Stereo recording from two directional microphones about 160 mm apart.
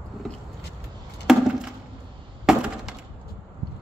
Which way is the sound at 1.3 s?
Centre (ahead or behind).